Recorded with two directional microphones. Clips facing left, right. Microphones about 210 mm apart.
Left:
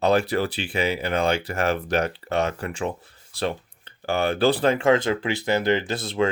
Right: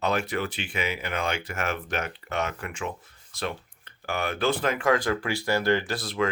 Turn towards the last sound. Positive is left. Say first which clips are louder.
# left 4 dB
turn(degrees=25)  # may be behind; listen again after turning